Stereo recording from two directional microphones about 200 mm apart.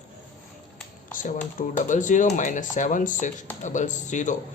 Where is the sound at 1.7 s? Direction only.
40° left (ahead or behind).